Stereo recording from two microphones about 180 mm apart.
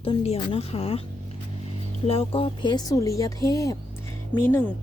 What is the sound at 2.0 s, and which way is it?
A woman's voice, 30° left (ahead or behind).